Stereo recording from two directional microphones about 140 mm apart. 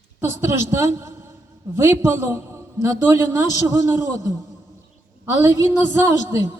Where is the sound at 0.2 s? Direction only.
20° right (ahead or behind).